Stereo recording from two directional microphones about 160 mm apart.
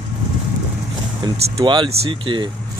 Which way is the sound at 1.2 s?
25° right (ahead or behind).